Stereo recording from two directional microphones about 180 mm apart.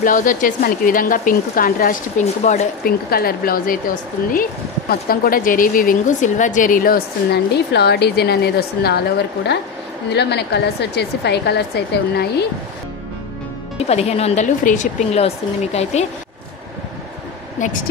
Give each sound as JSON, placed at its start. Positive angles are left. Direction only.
{"t": 0.0, "sound": "a woman's voice", "side_deg": 50}
{"t": 2.8, "sound": "speech", "side_deg": 55}
{"t": 10.0, "sound": "speech", "side_deg": 70}
{"t": 13.7, "sound": "speech", "side_deg": 35}
{"t": 17.6, "sound": "a woman's voice", "side_deg": 45}